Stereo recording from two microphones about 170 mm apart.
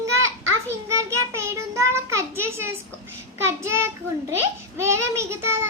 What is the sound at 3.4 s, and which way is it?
A child's voice, 15° right (ahead or behind).